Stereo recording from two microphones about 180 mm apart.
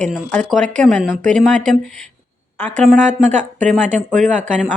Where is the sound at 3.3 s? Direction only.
45° right (ahead or behind).